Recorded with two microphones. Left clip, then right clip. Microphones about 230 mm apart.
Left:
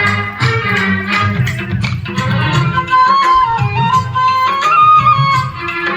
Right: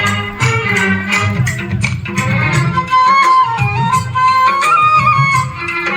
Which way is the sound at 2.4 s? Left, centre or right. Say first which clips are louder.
Left 1 dB; centre.